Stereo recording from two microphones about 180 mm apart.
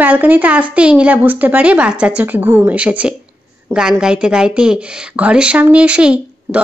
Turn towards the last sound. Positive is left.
turn(degrees=-5)  # may be behind; listen again after turning